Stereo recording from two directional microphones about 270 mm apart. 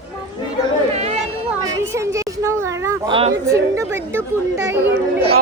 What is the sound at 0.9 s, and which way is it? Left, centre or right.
Chatter, right.